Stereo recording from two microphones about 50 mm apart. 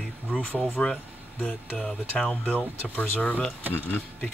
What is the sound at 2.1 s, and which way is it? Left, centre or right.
Speech, centre.